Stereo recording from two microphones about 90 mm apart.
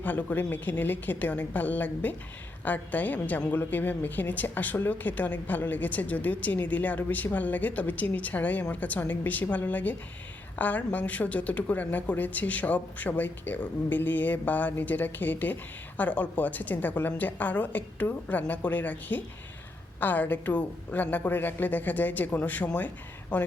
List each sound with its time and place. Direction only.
0.0 s a woman's voice: 20° left (ahead or behind)